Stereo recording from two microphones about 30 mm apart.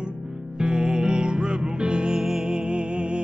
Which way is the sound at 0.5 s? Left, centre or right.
Right.